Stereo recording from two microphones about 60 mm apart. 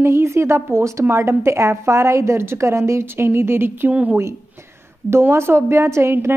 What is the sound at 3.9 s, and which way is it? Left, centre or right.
Speech, right.